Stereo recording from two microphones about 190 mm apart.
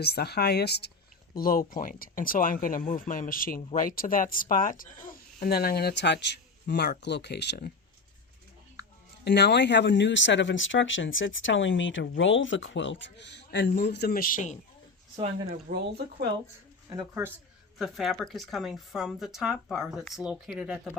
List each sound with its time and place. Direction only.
0.0 s speech: 55° left (ahead or behind)
1.4 s speech: 50° left (ahead or behind)
9.2 s speech: 65° left (ahead or behind); by 14.6 s 40° left (ahead or behind)
15.4 s speech: 55° right (ahead or behind)
17.7 s speech: centre (ahead or behind)